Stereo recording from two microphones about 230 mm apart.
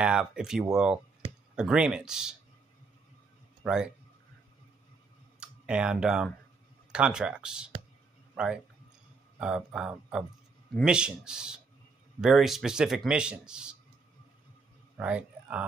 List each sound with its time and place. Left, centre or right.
0.0 s speech: centre
3.6 s speech: centre
5.4 s speech: centre
15.0 s speech: centre